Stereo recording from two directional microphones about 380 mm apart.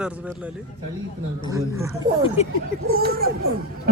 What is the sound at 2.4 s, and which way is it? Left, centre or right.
Speech, centre.